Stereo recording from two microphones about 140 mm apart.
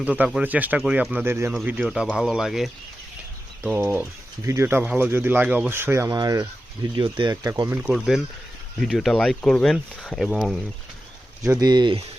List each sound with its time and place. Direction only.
0.3 s speech: 10° right (ahead or behind); by 7.8 s 25° right (ahead or behind)
7.8 s speech: 5° right (ahead or behind)
11.6 s speech: 30° right (ahead or behind)